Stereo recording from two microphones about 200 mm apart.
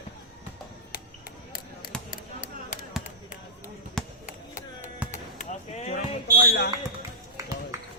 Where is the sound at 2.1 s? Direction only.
40° left (ahead or behind).